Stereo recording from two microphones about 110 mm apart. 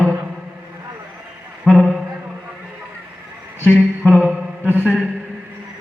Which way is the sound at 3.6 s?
15° left (ahead or behind).